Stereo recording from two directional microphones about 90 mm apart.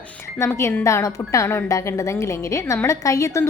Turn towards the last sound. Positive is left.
turn(degrees=35)  # may be behind; listen again after turning